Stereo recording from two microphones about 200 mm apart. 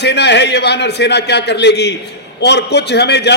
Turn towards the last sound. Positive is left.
turn(degrees=55)  # may be behind; listen again after turning